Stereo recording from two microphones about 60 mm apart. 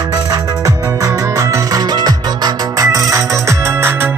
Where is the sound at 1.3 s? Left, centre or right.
Right.